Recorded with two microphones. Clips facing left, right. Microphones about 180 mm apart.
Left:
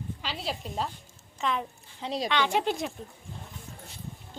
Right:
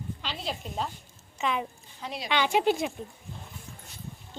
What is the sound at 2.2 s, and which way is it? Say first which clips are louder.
Speech: right 3 dB; 10° right (ahead or behind).